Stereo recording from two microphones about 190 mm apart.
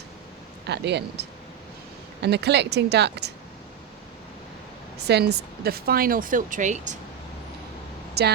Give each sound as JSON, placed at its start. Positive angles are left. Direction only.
{"t": 0.7, "sound": "speech", "side_deg": -60}
{"t": 5.0, "sound": "speech", "side_deg": -60}
{"t": 8.2, "sound": "speech", "side_deg": -60}